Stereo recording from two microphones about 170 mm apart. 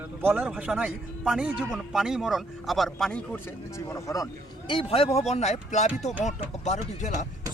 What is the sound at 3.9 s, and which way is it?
A man's voice, 15° left (ahead or behind).